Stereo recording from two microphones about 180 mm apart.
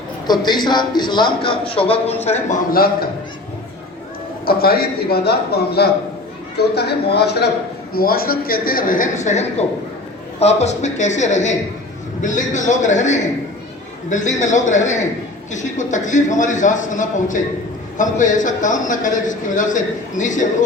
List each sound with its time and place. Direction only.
0.3 s a man's voice: 25° left (ahead or behind); by 2.6 s 40° left (ahead or behind)
2.7 s a man's voice: 55° left (ahead or behind)
4.4 s a man's voice: 55° left (ahead or behind)